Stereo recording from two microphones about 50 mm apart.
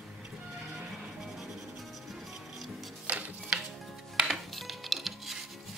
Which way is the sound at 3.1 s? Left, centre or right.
Right.